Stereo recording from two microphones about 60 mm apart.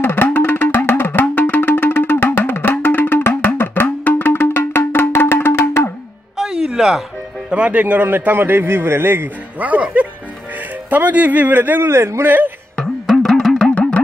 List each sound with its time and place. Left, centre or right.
0.0 s music: left
6.3 s music: centre
7.5 s a man's voice: right
9.6 s speech: right
11.9 s speech: right
12.3 s a sound: right
13.1 s music: centre